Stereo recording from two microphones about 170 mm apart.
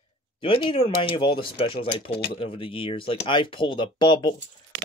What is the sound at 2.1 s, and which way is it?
Speech, 75° left (ahead or behind).